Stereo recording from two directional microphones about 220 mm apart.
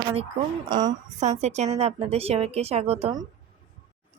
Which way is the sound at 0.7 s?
20° right (ahead or behind).